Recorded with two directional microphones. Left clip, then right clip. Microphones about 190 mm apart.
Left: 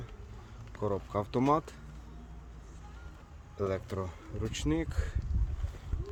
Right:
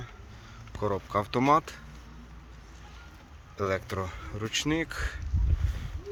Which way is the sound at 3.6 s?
Centre (ahead or behind).